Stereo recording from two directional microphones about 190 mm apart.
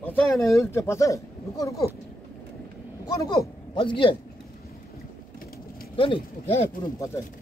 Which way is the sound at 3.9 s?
25° left (ahead or behind).